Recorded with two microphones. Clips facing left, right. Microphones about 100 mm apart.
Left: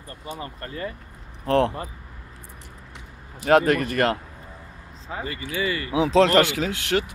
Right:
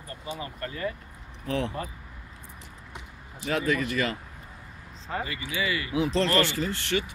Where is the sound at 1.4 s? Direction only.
65° left (ahead or behind).